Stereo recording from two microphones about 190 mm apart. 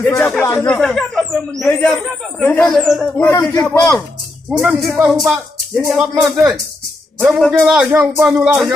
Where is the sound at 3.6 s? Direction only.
20° left (ahead or behind).